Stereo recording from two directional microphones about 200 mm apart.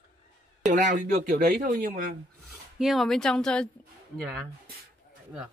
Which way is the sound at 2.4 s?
Centre (ahead or behind).